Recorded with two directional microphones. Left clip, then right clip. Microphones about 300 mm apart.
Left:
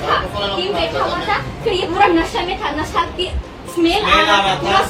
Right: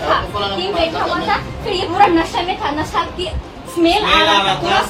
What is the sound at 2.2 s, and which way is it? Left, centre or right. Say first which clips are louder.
A woman's voice: right 1 dB; centre.